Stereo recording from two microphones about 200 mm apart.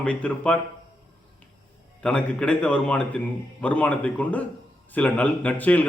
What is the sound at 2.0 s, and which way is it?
A man's voice, 5° left (ahead or behind).